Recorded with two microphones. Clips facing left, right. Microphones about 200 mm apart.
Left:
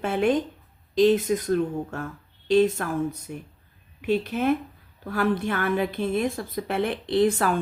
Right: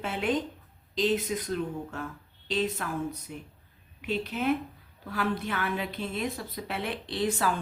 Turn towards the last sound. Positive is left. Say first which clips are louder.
# left 7 dB
turn(degrees=55)  # may be behind; listen again after turning